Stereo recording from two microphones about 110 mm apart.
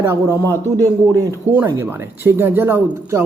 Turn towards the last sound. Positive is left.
turn(degrees=-25)  # may be behind; listen again after turning